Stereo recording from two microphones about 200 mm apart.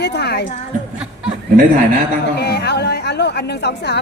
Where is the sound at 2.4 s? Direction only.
55° left (ahead or behind).